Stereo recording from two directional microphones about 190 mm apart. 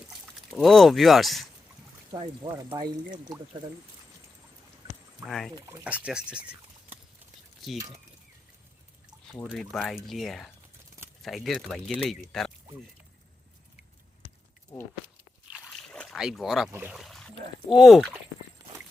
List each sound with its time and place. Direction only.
0.1 s speech: centre (ahead or behind)
2.1 s speech: 25° right (ahead or behind)
5.2 s speech: centre (ahead or behind)
5.5 s speech: 20° right (ahead or behind)
5.8 s speech: 5° right (ahead or behind)
7.6 s speech: centre (ahead or behind)
9.3 s speech: 5° right (ahead or behind)
14.7 s a sound: 15° left (ahead or behind)
15.5 s a sound: centre (ahead or behind)
16.7 s speech: 5° right (ahead or behind)